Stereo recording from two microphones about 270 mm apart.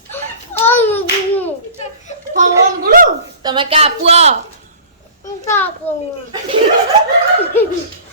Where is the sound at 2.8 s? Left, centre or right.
Right.